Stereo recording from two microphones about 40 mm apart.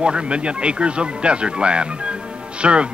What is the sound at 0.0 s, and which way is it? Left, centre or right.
A man's voice, right.